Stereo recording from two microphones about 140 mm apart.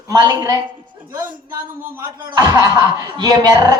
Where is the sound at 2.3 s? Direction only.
25° right (ahead or behind).